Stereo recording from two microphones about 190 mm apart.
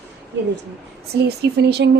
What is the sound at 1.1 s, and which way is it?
Speech, 60° right (ahead or behind).